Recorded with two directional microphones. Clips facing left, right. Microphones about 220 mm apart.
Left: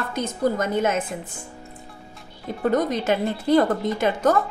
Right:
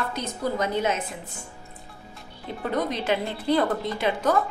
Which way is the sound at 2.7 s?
45° left (ahead or behind).